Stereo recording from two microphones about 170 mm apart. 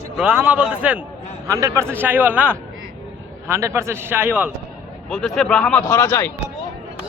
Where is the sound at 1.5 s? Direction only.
20° right (ahead or behind).